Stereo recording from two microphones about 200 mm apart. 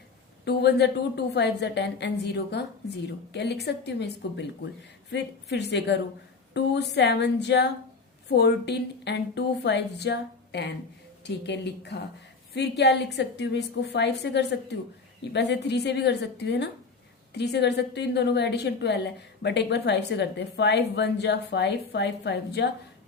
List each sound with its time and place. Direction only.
0.4 s a woman's voice: 55° left (ahead or behind)